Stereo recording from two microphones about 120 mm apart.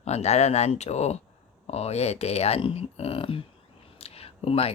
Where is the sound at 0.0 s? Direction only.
65° left (ahead or behind).